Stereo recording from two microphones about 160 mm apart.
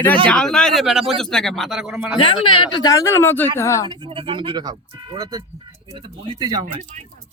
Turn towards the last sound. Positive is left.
turn(degrees=-25)  # may be behind; listen again after turning